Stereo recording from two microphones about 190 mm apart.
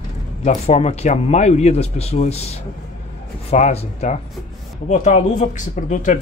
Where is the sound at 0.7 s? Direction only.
35° left (ahead or behind).